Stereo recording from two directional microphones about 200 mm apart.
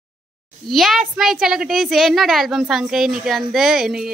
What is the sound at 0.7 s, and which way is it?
A woman's voice, centre (ahead or behind).